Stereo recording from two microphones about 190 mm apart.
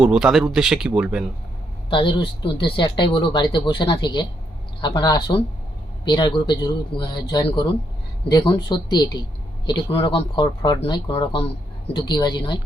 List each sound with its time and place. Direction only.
0.0 s speech: 5° right (ahead or behind)
1.9 s speech: 25° left (ahead or behind)